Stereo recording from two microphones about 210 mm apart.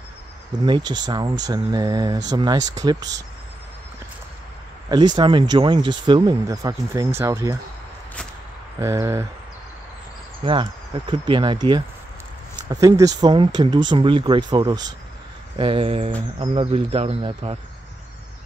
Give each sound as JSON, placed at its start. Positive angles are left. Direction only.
{"t": 0.7, "sound": "speech", "side_deg": -20}
{"t": 4.8, "sound": "speech", "side_deg": -20}
{"t": 8.8, "sound": "speech", "side_deg": -15}
{"t": 10.4, "sound": "speech", "side_deg": -25}